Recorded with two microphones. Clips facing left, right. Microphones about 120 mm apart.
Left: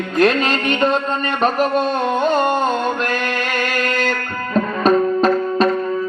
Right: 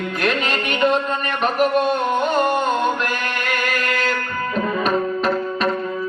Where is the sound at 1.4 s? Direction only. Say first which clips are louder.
Left 1 dB; 30° left (ahead or behind).